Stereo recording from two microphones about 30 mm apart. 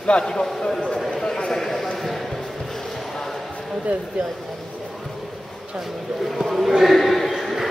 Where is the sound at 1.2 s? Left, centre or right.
Left.